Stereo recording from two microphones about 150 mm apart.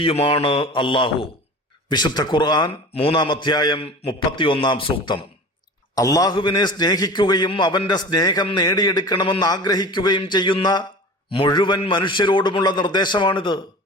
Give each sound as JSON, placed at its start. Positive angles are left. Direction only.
{"t": 0.0, "sound": "a man's voice", "side_deg": 40}